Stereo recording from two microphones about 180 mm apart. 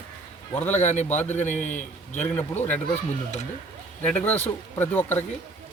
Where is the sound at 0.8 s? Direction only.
40° left (ahead or behind).